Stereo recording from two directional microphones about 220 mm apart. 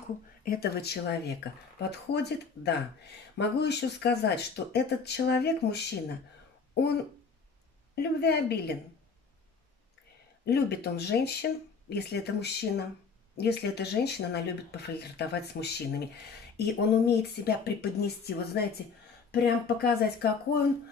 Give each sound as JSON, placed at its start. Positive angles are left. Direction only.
{"t": 0.5, "sound": "speech", "side_deg": 45}
{"t": 10.4, "sound": "speech", "side_deg": 45}